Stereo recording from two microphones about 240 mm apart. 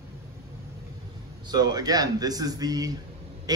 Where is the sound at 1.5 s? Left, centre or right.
Centre.